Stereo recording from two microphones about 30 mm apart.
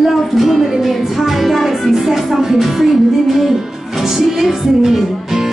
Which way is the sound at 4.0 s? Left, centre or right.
Centre.